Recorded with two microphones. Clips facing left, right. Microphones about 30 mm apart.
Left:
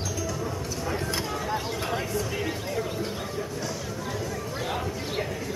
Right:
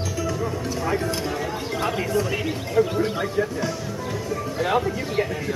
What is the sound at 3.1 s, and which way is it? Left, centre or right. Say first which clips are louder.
Music: right 8 dB; right.